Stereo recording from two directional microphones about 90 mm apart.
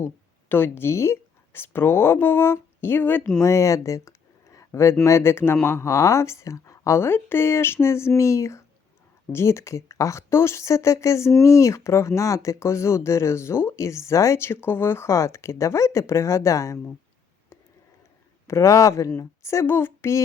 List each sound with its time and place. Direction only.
0.0 s speech: 20° left (ahead or behind)
3.4 s speech: 35° left (ahead or behind)
4.5 s a sound: 35° left (ahead or behind)
5.0 s speech: 30° left (ahead or behind)
18.4 s speech: 35° left (ahead or behind)